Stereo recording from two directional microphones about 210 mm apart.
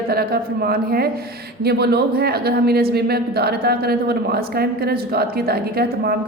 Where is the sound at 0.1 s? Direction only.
45° right (ahead or behind).